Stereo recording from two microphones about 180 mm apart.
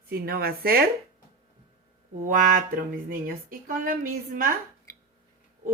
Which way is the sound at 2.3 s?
50° right (ahead or behind).